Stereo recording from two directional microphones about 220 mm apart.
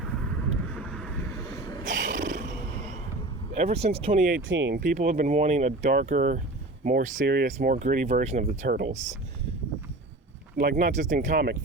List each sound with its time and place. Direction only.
0.7 s vehicle: 5° left (ahead or behind)
1.5 s a sound: 15° left (ahead or behind)
1.8 s roaring cats: 35° right (ahead or behind)
3.5 s speech: 30° right (ahead or behind)
4.4 s speech: 60° right (ahead or behind)
4.8 s speech: 35° right (ahead or behind)
10.8 s speech: 35° right (ahead or behind)